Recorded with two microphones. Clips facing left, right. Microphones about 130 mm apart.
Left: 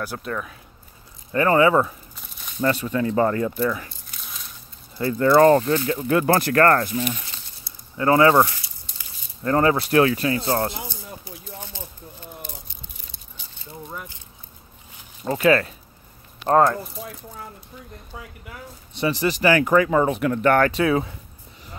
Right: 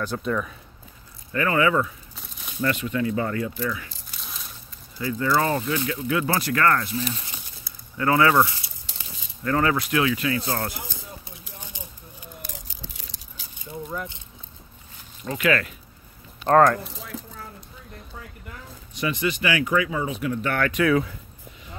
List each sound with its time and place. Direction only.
0.0 s speech: 5° left (ahead or behind)
1.3 s speech: 30° left (ahead or behind)
4.1 s a sound: centre (ahead or behind)
4.9 s speech: 50° left (ahead or behind)
8.0 s speech: 25° left (ahead or behind)
8.9 s a sound: 90° right
9.4 s speech: 30° left (ahead or behind)
11.7 s a sound: 15° right (ahead or behind)
12.6 s a sound: 90° right
15.2 s speech: 35° left (ahead or behind)
16.5 s speech: 20° left (ahead or behind)
18.9 s speech: 35° left (ahead or behind); by 20.6 s 55° left (ahead or behind)
20.6 s speech: 30° left (ahead or behind)